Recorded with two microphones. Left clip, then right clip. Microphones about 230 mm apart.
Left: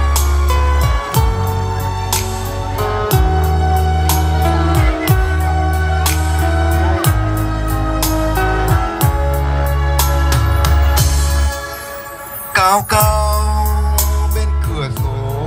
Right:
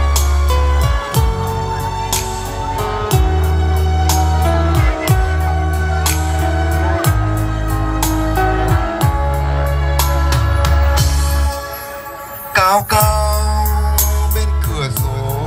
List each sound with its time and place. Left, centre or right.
2.8 s music: left
12.5 s music: centre